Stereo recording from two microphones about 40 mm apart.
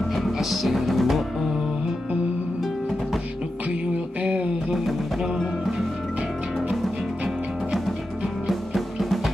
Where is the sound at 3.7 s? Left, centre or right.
Right.